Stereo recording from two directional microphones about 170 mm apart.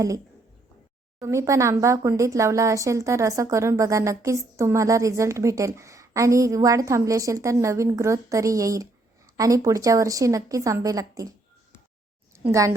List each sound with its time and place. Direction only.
1.2 s speech: 20° right (ahead or behind)
12.3 s a woman's voice: 15° right (ahead or behind)